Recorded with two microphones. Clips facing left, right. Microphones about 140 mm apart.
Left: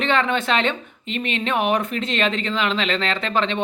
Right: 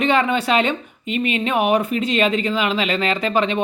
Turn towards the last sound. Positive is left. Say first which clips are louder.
# right 3 dB
turn(degrees=-10)  # may be behind; listen again after turning